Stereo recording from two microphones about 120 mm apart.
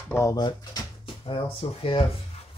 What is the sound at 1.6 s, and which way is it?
Speech, 60° left (ahead or behind).